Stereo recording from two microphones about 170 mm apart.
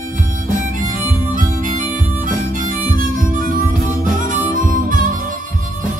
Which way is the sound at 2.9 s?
55° right (ahead or behind).